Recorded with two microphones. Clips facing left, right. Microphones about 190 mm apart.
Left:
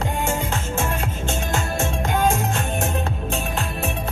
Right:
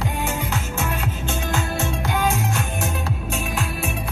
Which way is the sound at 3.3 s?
30° left (ahead or behind).